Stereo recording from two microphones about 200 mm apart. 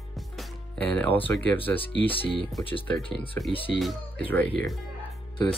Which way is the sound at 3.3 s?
10° left (ahead or behind).